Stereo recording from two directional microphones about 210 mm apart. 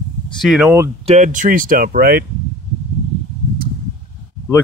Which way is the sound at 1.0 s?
35° right (ahead or behind).